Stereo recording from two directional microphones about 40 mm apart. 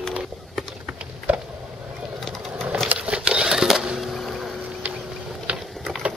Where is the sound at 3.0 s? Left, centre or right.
Right.